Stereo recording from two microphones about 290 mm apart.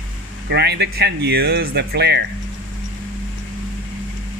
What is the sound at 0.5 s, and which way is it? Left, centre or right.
Speech, right.